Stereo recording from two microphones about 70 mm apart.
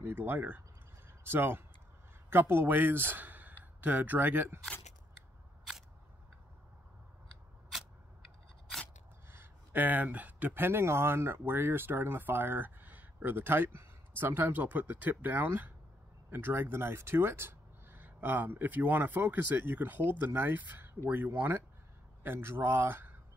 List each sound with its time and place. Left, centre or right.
0.0 s a man's voice: right
9.3 s speech: right